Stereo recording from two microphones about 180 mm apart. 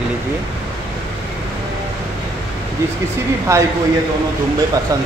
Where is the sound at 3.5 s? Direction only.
15° right (ahead or behind).